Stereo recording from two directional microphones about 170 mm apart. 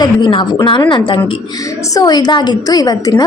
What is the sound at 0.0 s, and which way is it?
A woman's voice, 30° left (ahead or behind).